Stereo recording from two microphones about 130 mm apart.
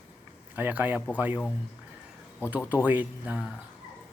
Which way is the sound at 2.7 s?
15° right (ahead or behind).